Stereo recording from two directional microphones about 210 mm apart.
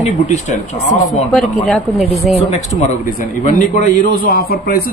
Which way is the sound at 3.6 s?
35° left (ahead or behind).